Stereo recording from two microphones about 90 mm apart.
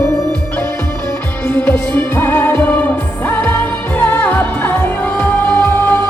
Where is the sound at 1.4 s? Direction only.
25° left (ahead or behind).